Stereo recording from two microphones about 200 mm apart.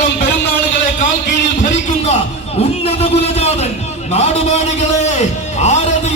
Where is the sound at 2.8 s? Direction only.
30° left (ahead or behind).